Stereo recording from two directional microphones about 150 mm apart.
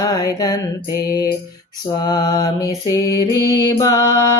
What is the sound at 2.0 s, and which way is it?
Mantra, 25° left (ahead or behind).